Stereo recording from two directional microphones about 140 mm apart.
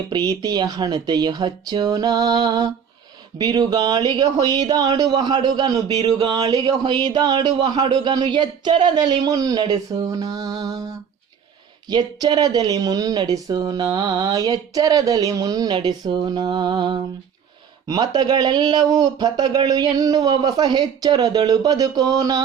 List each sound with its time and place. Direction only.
0.1 s speech: 30° right (ahead or behind)